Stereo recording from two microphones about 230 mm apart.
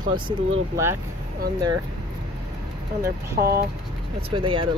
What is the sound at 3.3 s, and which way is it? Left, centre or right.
Speech, right.